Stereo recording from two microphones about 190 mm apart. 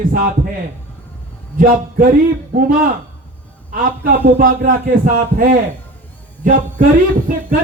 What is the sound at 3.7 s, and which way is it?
Speech, 45° right (ahead or behind).